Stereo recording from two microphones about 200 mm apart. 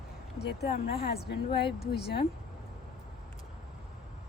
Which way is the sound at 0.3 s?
55° left (ahead or behind).